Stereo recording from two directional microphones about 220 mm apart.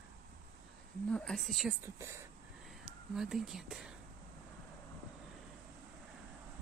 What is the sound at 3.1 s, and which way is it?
Speech, centre (ahead or behind).